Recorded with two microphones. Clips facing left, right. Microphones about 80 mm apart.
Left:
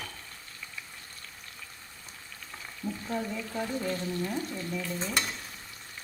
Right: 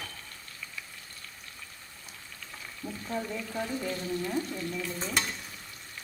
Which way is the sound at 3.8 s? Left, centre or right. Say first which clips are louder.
Left 1 dB; centre.